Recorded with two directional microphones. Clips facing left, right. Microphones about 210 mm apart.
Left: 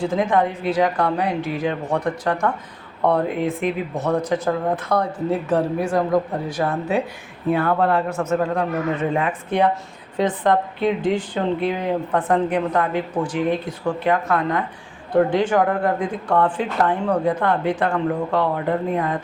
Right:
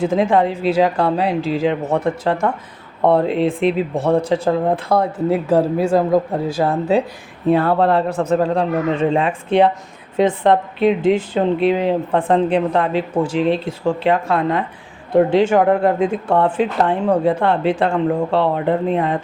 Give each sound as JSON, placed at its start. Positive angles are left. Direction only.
{"t": 0.0, "sound": "speech", "side_deg": -25}